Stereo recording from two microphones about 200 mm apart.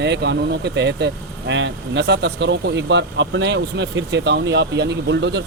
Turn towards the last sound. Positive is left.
turn(degrees=-60)  # may be behind; listen again after turning